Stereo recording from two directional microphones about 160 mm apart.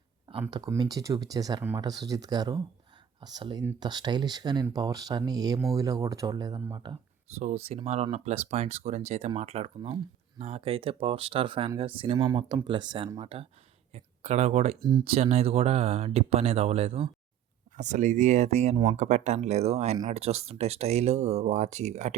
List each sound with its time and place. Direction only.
0.7 s speech: 20° right (ahead or behind)
7.3 s speech: 40° right (ahead or behind)
17.7 s speech: 50° right (ahead or behind)